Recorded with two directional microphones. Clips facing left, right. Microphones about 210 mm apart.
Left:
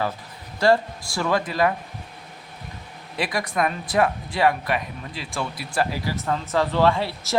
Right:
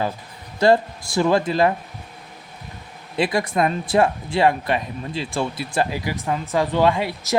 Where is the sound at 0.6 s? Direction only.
20° right (ahead or behind).